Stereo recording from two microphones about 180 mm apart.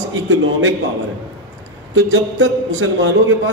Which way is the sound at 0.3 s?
90° right.